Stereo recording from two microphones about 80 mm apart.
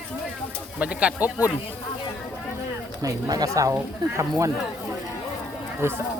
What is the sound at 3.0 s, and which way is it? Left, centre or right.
A woman's voice, right.